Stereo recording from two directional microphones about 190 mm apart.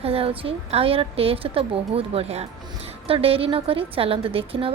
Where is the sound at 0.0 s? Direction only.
30° right (ahead or behind).